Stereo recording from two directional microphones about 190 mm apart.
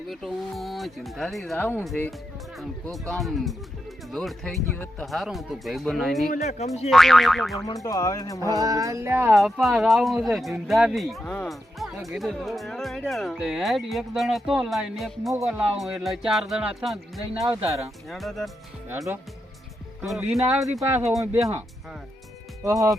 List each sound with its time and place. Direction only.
0.1 s speech: centre (ahead or behind)
6.2 s speech: 40° left (ahead or behind)
6.9 s speech: centre (ahead or behind)
7.7 s speech: 15° left (ahead or behind)
8.5 s speech: 20° right (ahead or behind)
9.3 s speech: centre (ahead or behind)
17.6 s speech: 15° right (ahead or behind)
18.1 s speech: centre (ahead or behind)
18.9 s speech: 15° right (ahead or behind)
20.0 s speech: centre (ahead or behind)
22.6 s speech: 15° right (ahead or behind)